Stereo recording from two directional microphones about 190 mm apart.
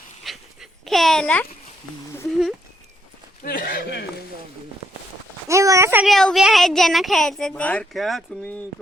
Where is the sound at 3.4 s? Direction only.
45° left (ahead or behind).